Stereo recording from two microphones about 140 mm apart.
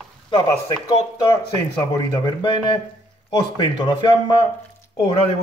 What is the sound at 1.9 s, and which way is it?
Speech, 35° left (ahead or behind).